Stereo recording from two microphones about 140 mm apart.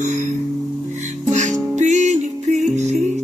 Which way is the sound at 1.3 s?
55° right (ahead or behind).